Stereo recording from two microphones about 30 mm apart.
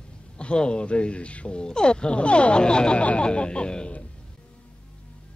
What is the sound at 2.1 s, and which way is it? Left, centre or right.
A woman's voice, left.